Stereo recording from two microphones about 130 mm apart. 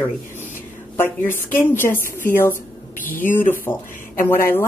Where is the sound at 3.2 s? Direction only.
15° left (ahead or behind).